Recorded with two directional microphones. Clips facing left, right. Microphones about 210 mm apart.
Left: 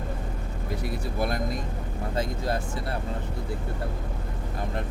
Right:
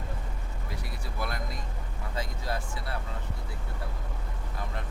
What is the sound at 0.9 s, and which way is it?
Speech, 50° left (ahead or behind).